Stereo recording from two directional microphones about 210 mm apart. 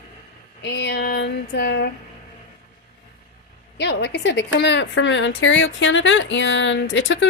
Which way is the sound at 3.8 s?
55° left (ahead or behind).